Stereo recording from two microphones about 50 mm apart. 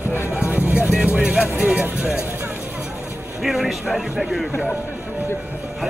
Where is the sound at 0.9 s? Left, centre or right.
Right.